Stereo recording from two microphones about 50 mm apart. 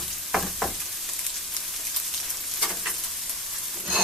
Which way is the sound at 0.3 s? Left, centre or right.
Centre.